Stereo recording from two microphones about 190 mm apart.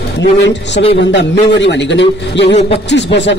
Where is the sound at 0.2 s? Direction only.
65° left (ahead or behind).